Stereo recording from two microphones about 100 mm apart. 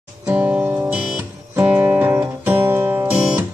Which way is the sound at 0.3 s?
15° right (ahead or behind).